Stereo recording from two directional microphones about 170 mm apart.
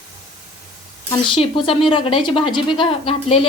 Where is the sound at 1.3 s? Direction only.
30° left (ahead or behind).